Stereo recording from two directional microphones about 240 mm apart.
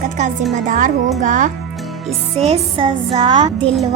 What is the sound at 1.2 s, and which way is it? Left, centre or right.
A child's voice, right.